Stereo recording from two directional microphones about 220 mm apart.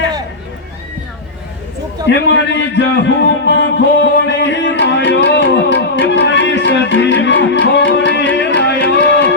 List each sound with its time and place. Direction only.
2.0 s a man's voice: 55° left (ahead or behind)
5.5 s music: 50° left (ahead or behind)